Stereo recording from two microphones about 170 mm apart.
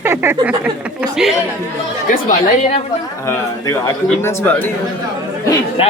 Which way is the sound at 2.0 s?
45° left (ahead or behind).